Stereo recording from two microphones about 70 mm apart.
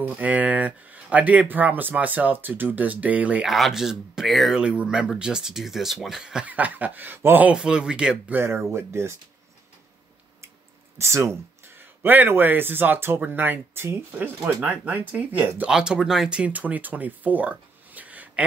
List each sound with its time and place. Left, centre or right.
0.2 s speech: right
3.4 s speech: centre
4.6 s speech: centre
6.4 s speech: right
7.4 s speech: centre
8.5 s speech: right
11.0 s speech: right
15.7 s speech: centre